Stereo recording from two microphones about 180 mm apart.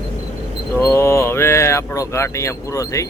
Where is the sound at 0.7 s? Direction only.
15° left (ahead or behind).